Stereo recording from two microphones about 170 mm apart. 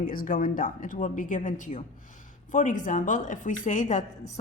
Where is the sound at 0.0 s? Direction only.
55° left (ahead or behind).